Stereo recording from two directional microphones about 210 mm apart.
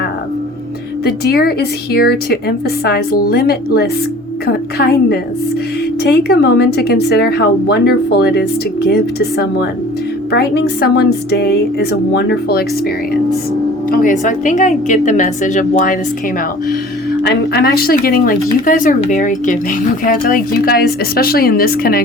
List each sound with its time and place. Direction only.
1.0 s a woman's voice: 50° left (ahead or behind)
13.9 s a woman's voice: 40° left (ahead or behind)
17.2 s a woman's voice: 50° left (ahead or behind)